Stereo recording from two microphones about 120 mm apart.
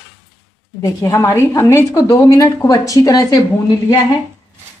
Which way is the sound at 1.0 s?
25° left (ahead or behind).